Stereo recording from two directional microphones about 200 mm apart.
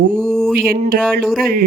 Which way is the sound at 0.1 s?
5° left (ahead or behind).